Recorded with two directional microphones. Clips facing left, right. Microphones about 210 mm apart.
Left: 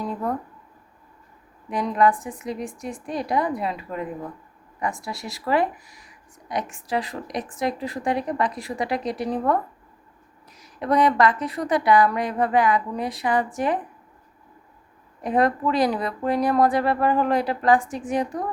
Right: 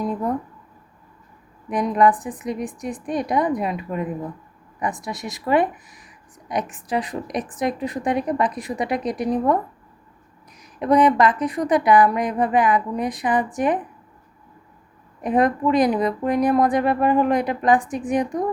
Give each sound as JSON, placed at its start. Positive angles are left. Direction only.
{"t": 1.7, "sound": "a woman's voice", "side_deg": -20}
{"t": 10.6, "sound": "a woman's voice", "side_deg": -15}
{"t": 15.2, "sound": "a woman's voice", "side_deg": -15}